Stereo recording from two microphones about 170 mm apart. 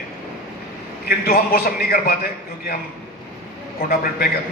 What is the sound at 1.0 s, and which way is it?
A man's voice, 65° left (ahead or behind).